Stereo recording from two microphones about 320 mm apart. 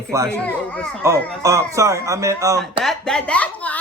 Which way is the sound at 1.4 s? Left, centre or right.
Centre.